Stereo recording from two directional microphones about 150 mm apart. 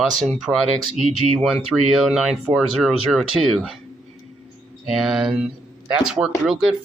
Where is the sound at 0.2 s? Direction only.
Centre (ahead or behind).